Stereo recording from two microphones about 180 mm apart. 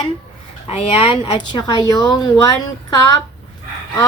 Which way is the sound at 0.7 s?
30° left (ahead or behind).